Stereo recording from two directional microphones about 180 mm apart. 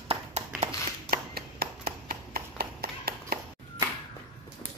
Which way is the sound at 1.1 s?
55° right (ahead or behind).